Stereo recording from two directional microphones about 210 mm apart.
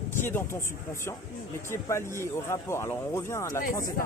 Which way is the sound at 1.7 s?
10° left (ahead or behind).